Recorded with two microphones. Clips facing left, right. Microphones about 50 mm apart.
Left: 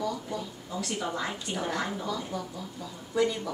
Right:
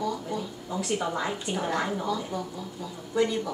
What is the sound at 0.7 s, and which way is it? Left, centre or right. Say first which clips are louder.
Speech: right 4 dB; right.